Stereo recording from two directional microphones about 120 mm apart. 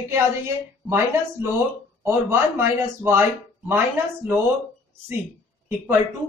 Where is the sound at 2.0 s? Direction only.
20° right (ahead or behind).